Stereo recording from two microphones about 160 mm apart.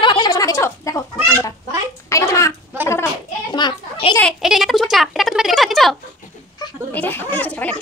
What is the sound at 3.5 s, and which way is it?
Children playing, 30° left (ahead or behind).